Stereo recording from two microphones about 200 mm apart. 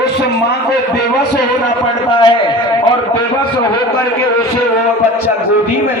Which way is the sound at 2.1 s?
25° left (ahead or behind).